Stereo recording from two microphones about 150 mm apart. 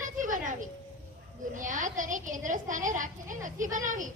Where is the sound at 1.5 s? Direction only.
60° right (ahead or behind).